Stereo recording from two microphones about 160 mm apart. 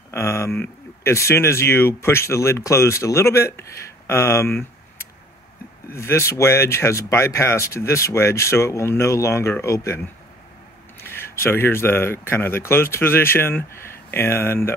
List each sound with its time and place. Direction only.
0.1 s speech: 15° left (ahead or behind)
11.1 s speech: 15° left (ahead or behind)